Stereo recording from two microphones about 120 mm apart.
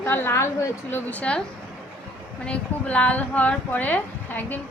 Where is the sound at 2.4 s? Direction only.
10° left (ahead or behind).